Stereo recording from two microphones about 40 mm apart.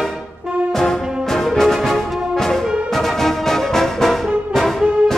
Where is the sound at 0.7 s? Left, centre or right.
Centre.